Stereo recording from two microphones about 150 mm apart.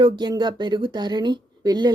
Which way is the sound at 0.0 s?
30° right (ahead or behind).